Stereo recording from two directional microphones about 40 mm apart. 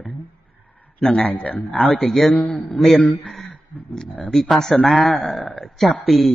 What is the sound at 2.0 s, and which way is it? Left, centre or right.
Speech, centre.